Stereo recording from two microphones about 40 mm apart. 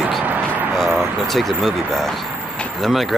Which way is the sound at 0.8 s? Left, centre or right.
Right.